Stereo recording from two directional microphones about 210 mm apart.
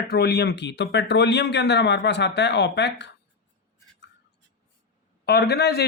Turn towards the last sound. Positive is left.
turn(degrees=50)  # may be behind; listen again after turning